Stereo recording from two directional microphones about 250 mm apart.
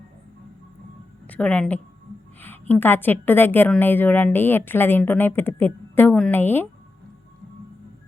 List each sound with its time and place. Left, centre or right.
1.3 s a woman's voice: centre